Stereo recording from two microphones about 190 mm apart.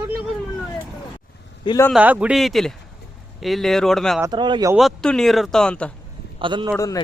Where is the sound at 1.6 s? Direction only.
20° left (ahead or behind).